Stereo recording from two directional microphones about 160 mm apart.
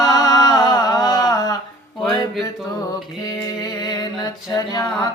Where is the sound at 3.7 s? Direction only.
25° left (ahead or behind).